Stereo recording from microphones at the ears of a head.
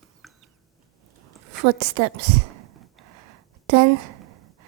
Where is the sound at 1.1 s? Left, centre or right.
Right.